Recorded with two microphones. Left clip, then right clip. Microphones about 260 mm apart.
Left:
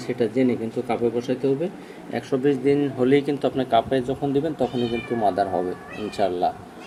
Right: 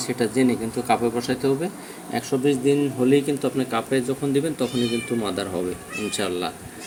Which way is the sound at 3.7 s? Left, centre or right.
Centre.